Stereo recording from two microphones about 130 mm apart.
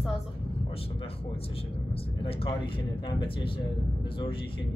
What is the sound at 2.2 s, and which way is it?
Speech, 45° left (ahead or behind).